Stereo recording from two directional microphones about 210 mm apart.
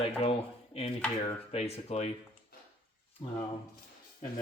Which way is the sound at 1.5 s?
30° left (ahead or behind).